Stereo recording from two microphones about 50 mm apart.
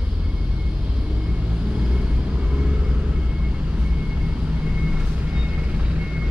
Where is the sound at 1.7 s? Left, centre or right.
Right.